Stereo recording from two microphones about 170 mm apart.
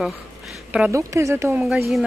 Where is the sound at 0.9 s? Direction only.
15° right (ahead or behind).